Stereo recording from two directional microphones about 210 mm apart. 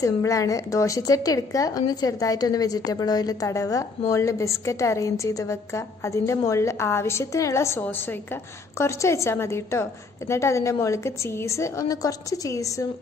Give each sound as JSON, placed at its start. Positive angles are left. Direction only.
{"t": 0.0, "sound": "a woman's voice", "side_deg": 15}